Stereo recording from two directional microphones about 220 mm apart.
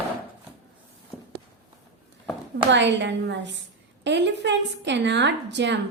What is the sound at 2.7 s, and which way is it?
Speech, 55° right (ahead or behind).